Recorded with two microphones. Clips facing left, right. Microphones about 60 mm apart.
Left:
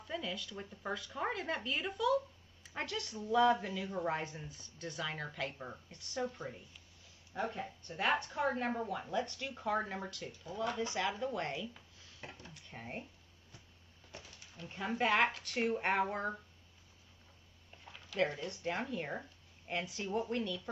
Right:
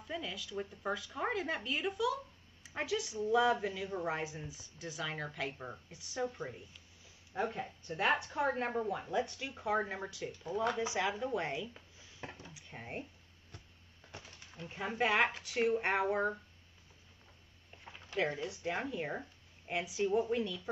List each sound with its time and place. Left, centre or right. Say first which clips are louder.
0.0 s speech: left 1 dB; centre
7.5 s speech: right 1 dB; centre
7.9 s speech: right 2 dB; right
14.1 s a sound: right 1 dB; right
14.7 s speech: left 1 dB; centre
15.0 s speech: even; centre
18.4 s speech: right 1 dB; centre